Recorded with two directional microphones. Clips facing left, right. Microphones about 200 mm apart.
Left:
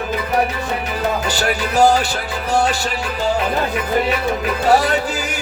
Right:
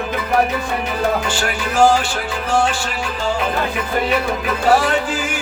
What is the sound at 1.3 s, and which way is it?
Music, 40° left (ahead or behind).